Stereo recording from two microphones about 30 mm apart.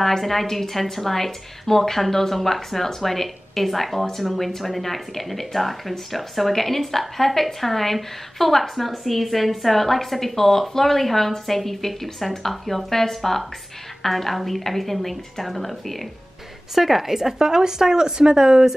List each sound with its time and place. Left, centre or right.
0.2 s speech: centre
16.7 s speech: centre; by 18.7 s right